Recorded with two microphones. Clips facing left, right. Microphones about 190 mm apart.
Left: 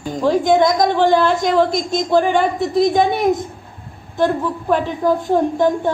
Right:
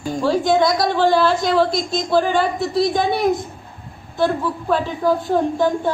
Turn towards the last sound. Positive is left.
turn(degrees=20)  # may be behind; listen again after turning